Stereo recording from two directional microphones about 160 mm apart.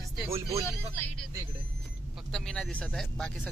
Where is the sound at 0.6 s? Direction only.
10° left (ahead or behind).